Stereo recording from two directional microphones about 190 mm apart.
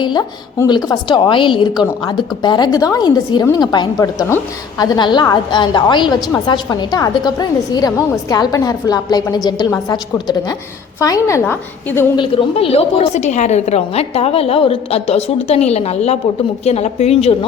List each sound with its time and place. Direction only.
0.0 s a woman's voice: 20° left (ahead or behind)
12.1 s a woman's voice: 30° left (ahead or behind)